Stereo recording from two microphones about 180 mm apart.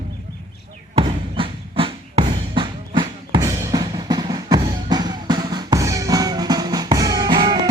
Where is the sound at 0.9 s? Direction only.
30° right (ahead or behind).